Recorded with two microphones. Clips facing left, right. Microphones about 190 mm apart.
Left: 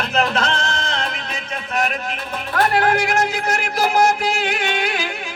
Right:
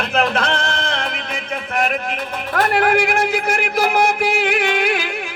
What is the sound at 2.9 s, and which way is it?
Music, 55° right (ahead or behind).